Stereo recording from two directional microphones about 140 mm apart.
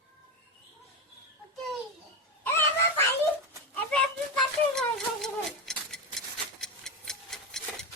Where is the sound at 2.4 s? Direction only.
15° left (ahead or behind).